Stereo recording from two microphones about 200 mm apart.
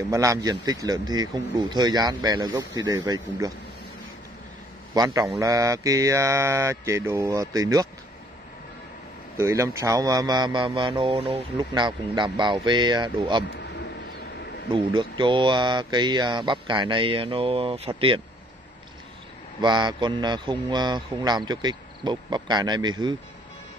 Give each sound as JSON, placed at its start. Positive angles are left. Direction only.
{"t": 0.1, "sound": "speech", "side_deg": -15}
{"t": 4.9, "sound": "mantra", "side_deg": -20}
{"t": 9.4, "sound": "speech", "side_deg": -15}
{"t": 13.5, "sound": "vehicle", "side_deg": 60}
{"t": 15.0, "sound": "speech", "side_deg": -25}
{"t": 19.6, "sound": "speech", "side_deg": -20}